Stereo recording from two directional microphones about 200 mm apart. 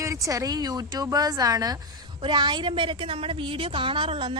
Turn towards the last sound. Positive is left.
turn(degrees=-25)  # may be behind; listen again after turning